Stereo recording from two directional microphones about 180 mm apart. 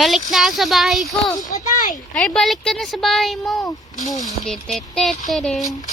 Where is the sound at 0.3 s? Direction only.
Centre (ahead or behind).